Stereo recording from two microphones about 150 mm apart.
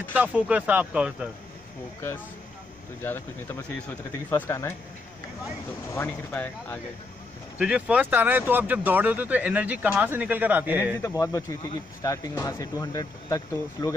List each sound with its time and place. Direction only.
0.1 s speech: 10° right (ahead or behind)
3.0 s speech: 15° left (ahead or behind)
5.9 s speech: 15° left (ahead or behind)
7.5 s speech: 10° right (ahead or behind)
11.0 s speech: 20° left (ahead or behind)